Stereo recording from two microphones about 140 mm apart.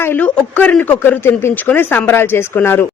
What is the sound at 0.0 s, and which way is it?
Speech, 10° left (ahead or behind).